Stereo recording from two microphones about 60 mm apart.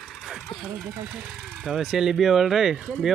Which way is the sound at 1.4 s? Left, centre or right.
Centre.